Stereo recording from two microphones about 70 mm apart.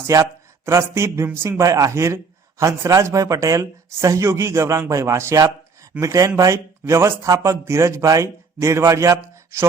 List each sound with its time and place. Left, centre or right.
0.1 s speech: right